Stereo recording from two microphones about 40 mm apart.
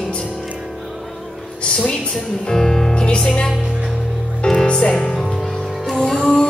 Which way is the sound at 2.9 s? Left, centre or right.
Left.